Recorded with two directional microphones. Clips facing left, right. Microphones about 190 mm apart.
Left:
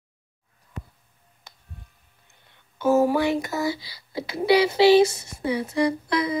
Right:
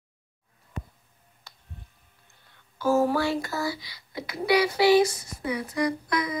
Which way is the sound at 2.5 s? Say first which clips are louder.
Left 3 dB; 20° left (ahead or behind).